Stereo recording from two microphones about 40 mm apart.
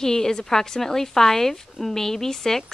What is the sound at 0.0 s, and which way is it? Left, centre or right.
A woman's voice, centre.